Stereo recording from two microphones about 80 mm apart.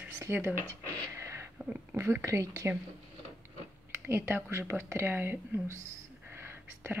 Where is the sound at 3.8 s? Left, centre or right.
Right.